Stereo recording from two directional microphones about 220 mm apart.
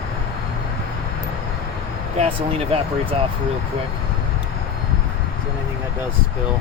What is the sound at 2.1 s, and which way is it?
Speech, 30° right (ahead or behind).